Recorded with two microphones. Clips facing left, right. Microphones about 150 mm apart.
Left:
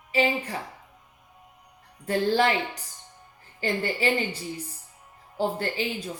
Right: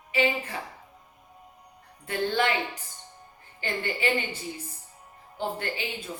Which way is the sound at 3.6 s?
35° left (ahead or behind).